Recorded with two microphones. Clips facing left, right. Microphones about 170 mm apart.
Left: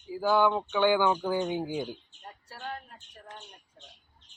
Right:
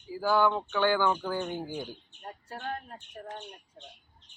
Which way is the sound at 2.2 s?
50° right (ahead or behind).